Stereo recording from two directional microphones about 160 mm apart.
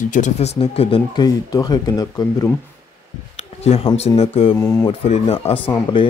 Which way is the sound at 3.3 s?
40° left (ahead or behind).